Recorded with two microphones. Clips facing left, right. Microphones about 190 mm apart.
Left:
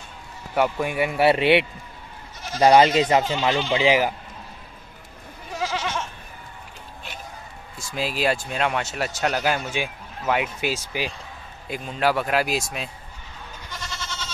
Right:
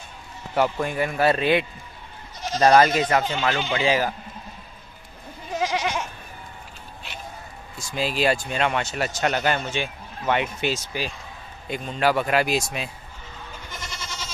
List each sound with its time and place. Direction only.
0.6 s a man's voice: 10° left (ahead or behind)
1.2 s speech: 25° left (ahead or behind)
2.6 s a man's voice: 20° left (ahead or behind)
5.5 s goat: 20° right (ahead or behind)
7.9 s speech: centre (ahead or behind)
13.7 s goat: 20° right (ahead or behind)